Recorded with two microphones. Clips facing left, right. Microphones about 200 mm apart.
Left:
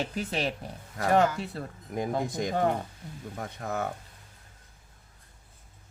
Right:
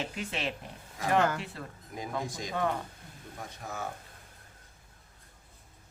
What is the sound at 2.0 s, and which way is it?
Speech, 55° left (ahead or behind).